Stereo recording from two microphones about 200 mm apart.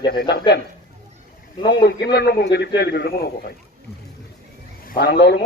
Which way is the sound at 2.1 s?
55° left (ahead or behind).